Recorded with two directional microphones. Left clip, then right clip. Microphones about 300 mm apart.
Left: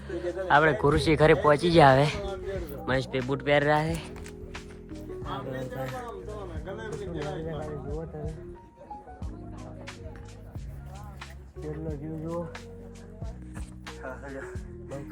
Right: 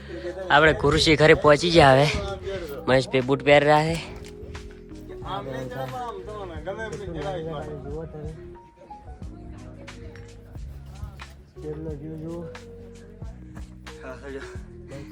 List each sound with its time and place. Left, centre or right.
0.2 s a man's voice: centre
4.5 s music: centre
5.2 s music: centre
6.7 s a sound: centre
7.6 s music: centre
11.2 s speech: centre
13.8 s music: centre